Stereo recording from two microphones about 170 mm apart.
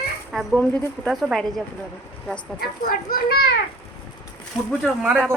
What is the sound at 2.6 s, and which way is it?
Speech, 60° left (ahead or behind).